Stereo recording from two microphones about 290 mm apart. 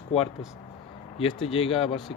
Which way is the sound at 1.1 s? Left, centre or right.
Centre.